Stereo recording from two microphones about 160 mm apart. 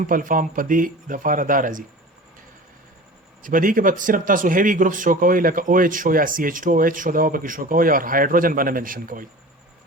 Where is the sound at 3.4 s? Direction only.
60° right (ahead or behind).